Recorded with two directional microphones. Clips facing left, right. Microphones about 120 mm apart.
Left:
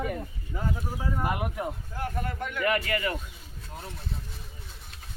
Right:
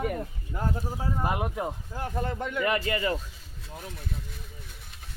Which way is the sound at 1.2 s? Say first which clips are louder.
Right 2 dB; 25° right (ahead or behind).